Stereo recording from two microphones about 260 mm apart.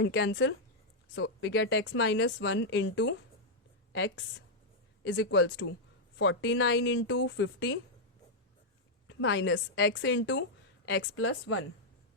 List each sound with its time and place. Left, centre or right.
0.0 s speech: left
9.0 s speech: left